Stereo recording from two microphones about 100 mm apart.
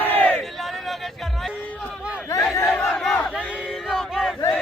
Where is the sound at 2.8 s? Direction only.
5° left (ahead or behind).